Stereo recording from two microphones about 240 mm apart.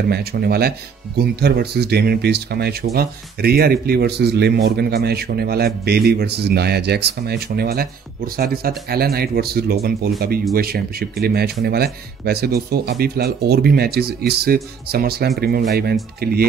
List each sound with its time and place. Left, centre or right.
0.1 s speech: right